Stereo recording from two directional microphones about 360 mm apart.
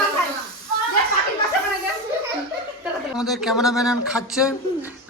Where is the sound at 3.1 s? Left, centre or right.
Centre.